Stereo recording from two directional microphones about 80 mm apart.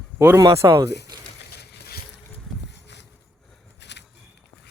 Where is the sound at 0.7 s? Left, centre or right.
Right.